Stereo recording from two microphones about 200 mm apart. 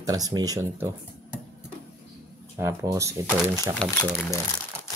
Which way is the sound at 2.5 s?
15° right (ahead or behind).